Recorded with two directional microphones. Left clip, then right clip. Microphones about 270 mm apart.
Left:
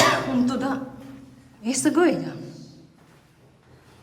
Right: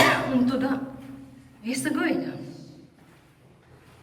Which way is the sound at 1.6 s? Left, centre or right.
Centre.